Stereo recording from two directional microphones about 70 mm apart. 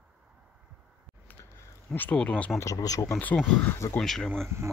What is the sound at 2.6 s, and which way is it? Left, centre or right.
Speech, left.